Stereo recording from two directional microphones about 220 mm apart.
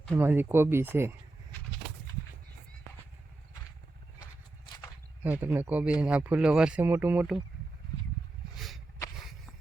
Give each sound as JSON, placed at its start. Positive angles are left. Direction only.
{"t": 0.1, "sound": "speech", "side_deg": -10}
{"t": 5.2, "sound": "speech", "side_deg": -10}
{"t": 8.5, "sound": "a sound", "side_deg": 0}